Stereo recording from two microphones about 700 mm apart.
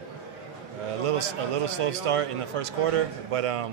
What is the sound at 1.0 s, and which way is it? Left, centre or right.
A man's voice, right.